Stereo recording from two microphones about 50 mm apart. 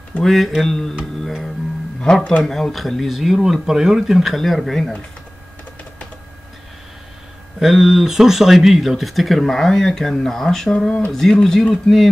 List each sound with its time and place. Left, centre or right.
0.2 s speech: centre
2.0 s speech: centre
2.4 s speech: centre
7.6 s speech: centre